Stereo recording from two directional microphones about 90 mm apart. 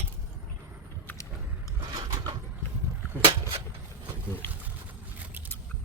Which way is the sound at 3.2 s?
90° right.